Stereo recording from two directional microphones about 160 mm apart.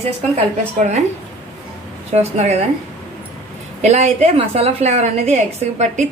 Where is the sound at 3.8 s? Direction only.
40° right (ahead or behind).